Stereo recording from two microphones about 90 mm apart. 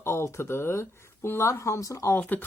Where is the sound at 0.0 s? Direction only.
30° left (ahead or behind).